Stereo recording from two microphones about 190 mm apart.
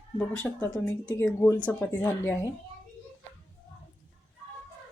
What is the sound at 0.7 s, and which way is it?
Speech, 20° left (ahead or behind).